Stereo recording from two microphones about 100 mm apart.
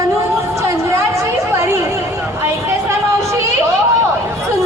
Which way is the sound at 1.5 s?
25° right (ahead or behind).